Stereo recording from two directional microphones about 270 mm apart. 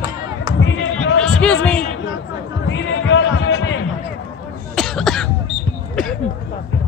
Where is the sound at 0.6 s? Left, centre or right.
Left.